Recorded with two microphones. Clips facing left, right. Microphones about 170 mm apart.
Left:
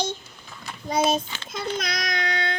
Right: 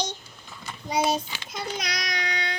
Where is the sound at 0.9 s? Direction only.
10° right (ahead or behind).